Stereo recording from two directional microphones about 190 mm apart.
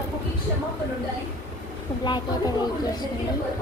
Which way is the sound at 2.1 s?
20° left (ahead or behind).